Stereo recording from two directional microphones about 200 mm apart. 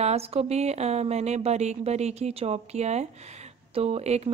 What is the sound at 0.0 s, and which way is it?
A woman's voice, 30° right (ahead or behind).